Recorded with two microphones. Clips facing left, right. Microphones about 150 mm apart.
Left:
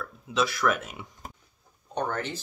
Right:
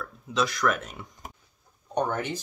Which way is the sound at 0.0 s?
Centre (ahead or behind).